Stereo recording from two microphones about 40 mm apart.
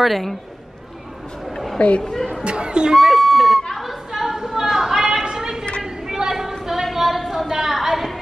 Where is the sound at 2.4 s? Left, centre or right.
Right.